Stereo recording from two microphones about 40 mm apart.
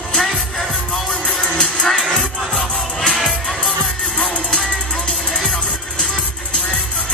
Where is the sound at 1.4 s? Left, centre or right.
Centre.